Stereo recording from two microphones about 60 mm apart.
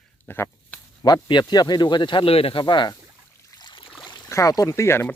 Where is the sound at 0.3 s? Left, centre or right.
Left.